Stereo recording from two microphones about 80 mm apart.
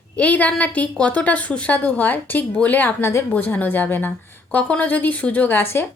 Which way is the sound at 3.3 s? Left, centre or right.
Left.